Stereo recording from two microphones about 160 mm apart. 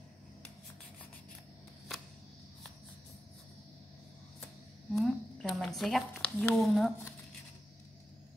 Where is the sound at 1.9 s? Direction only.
Centre (ahead or behind).